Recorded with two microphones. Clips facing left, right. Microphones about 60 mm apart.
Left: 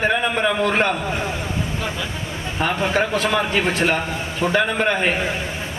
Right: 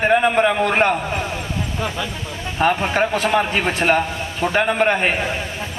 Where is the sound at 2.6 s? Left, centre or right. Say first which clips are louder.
Right 3 dB; right.